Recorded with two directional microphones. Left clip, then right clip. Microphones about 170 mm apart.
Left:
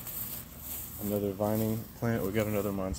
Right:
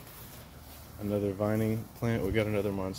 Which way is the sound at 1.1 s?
20° right (ahead or behind).